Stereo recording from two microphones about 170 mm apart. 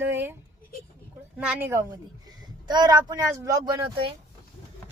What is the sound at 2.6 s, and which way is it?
Speech, 25° right (ahead or behind).